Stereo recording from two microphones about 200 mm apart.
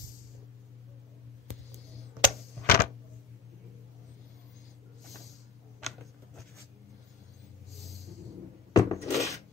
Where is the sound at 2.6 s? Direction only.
50° left (ahead or behind).